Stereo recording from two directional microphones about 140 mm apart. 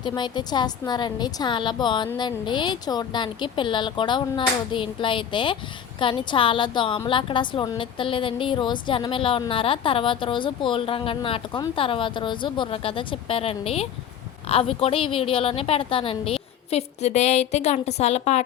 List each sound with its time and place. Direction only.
0.0 s a woman's voice: 30° left (ahead or behind); by 18.4 s 50° left (ahead or behind)